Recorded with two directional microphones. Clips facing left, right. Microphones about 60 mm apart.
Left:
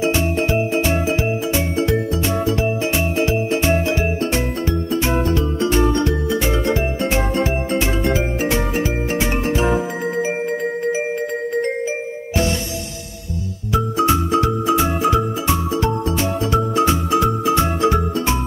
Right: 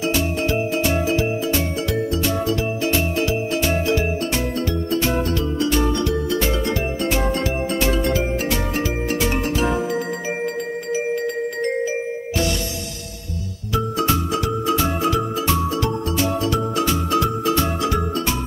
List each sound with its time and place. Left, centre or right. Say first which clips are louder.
0.0 s music: left 3 dB; left
10.9 s music: right 2 dB; left
13.7 s music: left 3 dB; left